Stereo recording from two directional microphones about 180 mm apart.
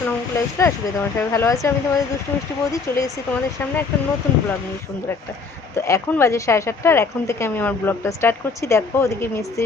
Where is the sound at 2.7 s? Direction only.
15° left (ahead or behind).